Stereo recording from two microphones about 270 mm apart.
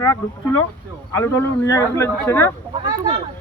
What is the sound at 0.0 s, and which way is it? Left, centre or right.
Speech, centre.